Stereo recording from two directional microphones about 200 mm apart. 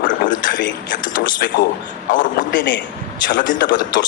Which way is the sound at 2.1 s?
40° left (ahead or behind).